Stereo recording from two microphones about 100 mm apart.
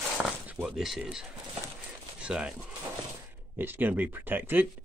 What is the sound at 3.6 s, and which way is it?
Speech, 20° right (ahead or behind).